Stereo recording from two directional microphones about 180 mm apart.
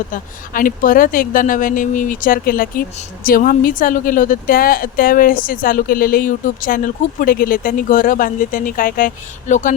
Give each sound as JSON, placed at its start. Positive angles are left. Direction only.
{"t": 0.1, "sound": "a woman's voice", "side_deg": 50}